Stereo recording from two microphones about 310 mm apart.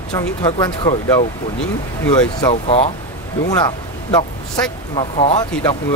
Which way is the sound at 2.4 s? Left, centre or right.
Centre.